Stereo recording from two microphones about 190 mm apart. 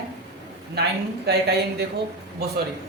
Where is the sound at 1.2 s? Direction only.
60° right (ahead or behind).